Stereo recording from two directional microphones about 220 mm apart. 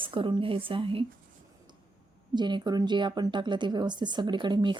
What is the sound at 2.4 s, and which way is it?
A woman's voice, 20° right (ahead or behind).